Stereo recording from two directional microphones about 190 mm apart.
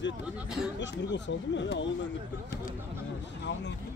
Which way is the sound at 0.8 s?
70° left (ahead or behind).